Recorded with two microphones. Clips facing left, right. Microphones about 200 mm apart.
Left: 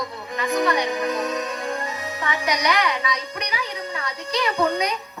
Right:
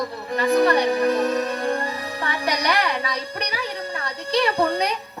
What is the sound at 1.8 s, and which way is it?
Speech, 35° right (ahead or behind).